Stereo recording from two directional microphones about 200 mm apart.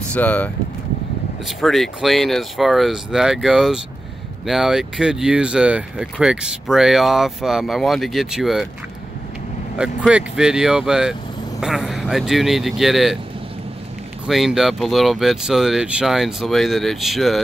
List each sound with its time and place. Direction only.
0.1 s speech: 10° left (ahead or behind)
1.6 s speech: centre (ahead or behind)
9.8 s speech: 5° right (ahead or behind)
14.2 s speech: centre (ahead or behind)